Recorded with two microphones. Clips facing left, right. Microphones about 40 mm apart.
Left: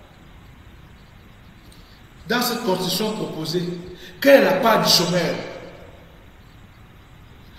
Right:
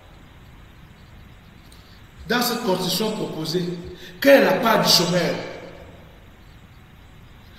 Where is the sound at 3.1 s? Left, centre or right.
Left.